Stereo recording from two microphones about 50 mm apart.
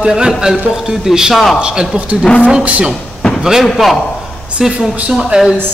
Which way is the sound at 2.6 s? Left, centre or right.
Right.